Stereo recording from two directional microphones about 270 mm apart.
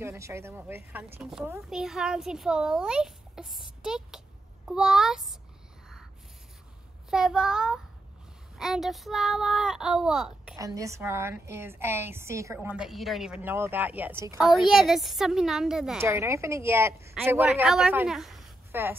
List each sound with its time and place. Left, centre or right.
0.0 s a woman's voice: centre
7.1 s a woman's voice: centre